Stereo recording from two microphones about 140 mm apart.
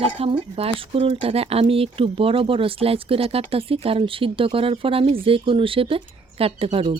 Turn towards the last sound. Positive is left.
turn(degrees=-45)  # may be behind; listen again after turning